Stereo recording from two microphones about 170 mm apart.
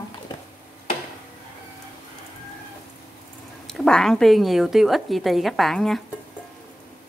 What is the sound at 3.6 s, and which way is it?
A woman's voice, 5° left (ahead or behind).